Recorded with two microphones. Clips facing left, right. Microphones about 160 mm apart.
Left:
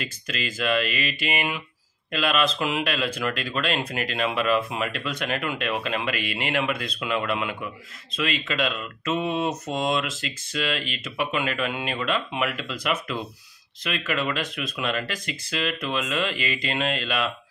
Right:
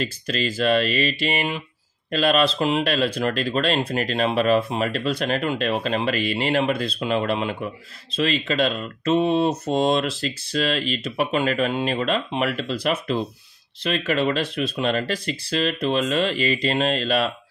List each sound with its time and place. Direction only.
0.0 s speech: 35° right (ahead or behind)